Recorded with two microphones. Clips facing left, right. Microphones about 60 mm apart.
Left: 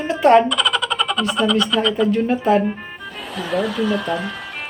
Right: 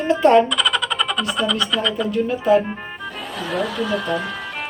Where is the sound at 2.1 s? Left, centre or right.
Left.